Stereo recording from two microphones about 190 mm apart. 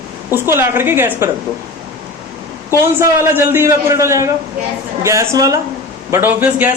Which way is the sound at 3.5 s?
15° right (ahead or behind).